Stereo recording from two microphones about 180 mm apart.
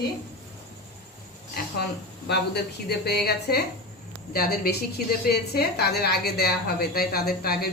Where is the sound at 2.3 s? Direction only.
65° left (ahead or behind).